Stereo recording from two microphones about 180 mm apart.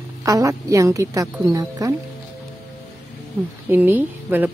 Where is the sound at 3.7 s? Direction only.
10° right (ahead or behind).